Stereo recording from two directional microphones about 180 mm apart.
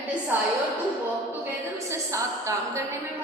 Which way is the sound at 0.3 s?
10° right (ahead or behind).